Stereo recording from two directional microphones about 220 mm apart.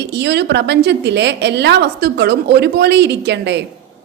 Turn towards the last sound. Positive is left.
turn(degrees=-50)  # may be behind; listen again after turning